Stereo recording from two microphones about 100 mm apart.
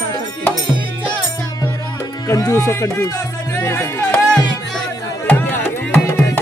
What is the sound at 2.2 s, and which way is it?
Speech, 30° left (ahead or behind).